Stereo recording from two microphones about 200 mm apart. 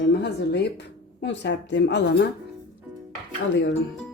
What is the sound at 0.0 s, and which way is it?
A woman's voice, 60° left (ahead or behind).